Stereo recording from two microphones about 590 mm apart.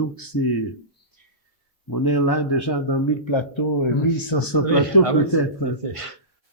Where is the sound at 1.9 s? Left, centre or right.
Left.